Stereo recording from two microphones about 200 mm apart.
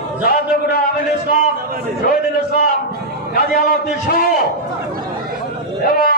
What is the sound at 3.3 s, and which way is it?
Speech, 45° left (ahead or behind).